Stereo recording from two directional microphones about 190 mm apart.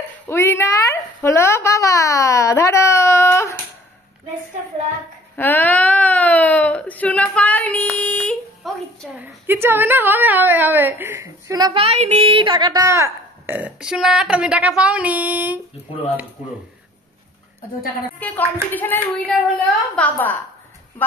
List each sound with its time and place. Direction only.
0.3 s speech: 15° left (ahead or behind)
5.3 s a sound: 10° left (ahead or behind)
9.2 s a woman's voice: 10° right (ahead or behind)
11.8 s a woman's voice: 35° right (ahead or behind); by 15.6 s 10° right (ahead or behind)
18.2 s speech: 10° left (ahead or behind)